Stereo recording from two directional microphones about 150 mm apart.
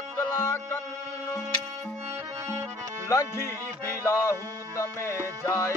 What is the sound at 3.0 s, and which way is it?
Music, 20° left (ahead or behind).